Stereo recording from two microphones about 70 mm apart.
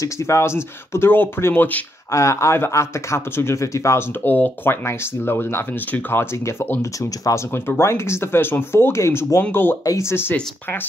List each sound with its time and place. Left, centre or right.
0.0 s speech: left
2.0 s speech: left
4.2 s speech: left
6.3 s speech: left
7.5 s speech: left
9.5 s speech: left
9.8 s speech: left